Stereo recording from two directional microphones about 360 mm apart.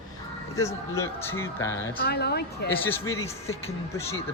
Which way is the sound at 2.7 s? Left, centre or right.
Centre.